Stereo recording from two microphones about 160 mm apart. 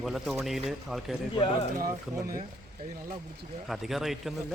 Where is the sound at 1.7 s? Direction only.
60° right (ahead or behind).